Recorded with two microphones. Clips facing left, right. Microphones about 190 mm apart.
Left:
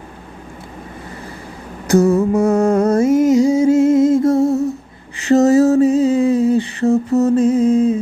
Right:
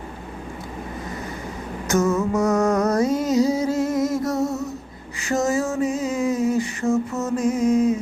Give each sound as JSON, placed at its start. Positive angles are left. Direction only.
{"t": 1.9, "sound": "music", "side_deg": 35}
{"t": 4.4, "sound": "humming", "side_deg": 30}
{"t": 5.2, "sound": "a sound", "side_deg": 35}